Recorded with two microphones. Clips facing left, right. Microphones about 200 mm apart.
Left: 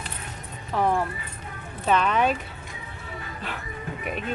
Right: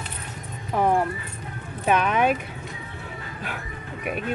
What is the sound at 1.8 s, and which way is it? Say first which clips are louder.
Speech: right 1 dB; 10° right (ahead or behind).